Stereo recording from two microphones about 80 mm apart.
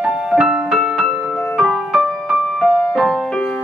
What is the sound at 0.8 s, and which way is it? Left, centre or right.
Music, centre.